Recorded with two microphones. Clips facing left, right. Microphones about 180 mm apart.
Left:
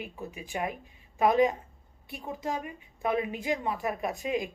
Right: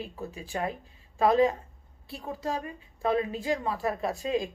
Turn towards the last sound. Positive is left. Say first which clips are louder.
# right 2 dB
turn(degrees=15)  # may be behind; listen again after turning